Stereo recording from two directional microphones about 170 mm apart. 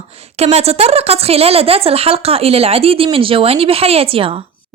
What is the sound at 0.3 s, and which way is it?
Speech, 40° right (ahead or behind).